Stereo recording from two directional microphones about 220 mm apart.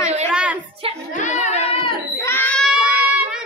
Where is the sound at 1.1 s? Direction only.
35° left (ahead or behind).